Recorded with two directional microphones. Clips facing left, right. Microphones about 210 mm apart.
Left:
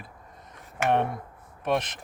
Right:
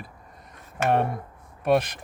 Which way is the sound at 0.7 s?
15° left (ahead or behind).